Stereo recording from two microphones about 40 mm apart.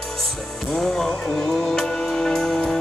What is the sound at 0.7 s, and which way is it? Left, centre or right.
Music, centre.